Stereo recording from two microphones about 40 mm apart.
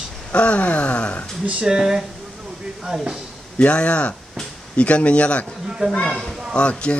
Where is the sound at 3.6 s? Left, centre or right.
Left.